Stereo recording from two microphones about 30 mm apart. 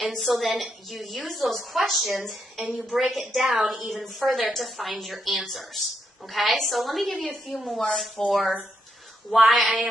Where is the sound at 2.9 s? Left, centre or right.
Right.